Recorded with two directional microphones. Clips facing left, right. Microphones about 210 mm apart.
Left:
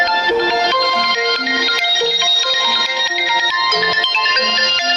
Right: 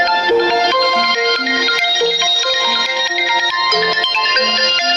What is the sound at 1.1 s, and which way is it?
Music, 55° right (ahead or behind).